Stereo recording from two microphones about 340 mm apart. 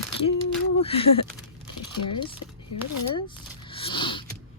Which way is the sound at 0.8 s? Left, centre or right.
Centre.